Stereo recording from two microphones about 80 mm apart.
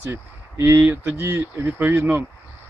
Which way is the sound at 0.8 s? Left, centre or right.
Right.